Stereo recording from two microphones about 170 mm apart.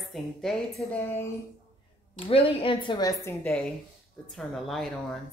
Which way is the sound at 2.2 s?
30° left (ahead or behind).